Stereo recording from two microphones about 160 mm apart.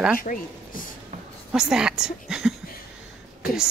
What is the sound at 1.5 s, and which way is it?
A woman's voice, 5° right (ahead or behind).